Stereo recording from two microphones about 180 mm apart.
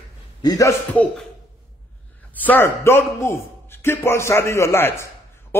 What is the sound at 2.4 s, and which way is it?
A man's voice, 10° left (ahead or behind).